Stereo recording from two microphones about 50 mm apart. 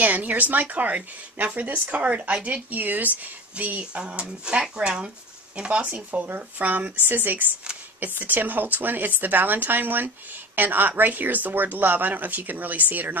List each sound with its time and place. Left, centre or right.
0.0 s speech: right
3.9 s speech: right
5.6 s speech: right